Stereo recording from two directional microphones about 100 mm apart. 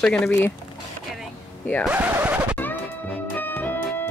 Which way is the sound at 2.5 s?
15° left (ahead or behind).